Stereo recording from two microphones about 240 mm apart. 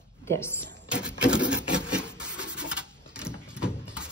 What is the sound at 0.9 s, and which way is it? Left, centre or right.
Printer, centre.